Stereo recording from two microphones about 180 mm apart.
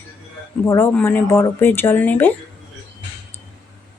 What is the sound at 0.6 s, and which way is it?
Speech, 10° left (ahead or behind).